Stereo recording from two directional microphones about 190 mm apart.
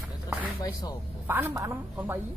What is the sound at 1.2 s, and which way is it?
Speech, 15° right (ahead or behind).